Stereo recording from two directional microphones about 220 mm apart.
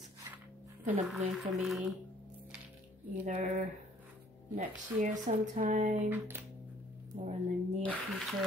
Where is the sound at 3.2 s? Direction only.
35° right (ahead or behind).